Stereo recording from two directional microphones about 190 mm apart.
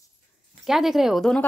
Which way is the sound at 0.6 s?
Centre (ahead or behind).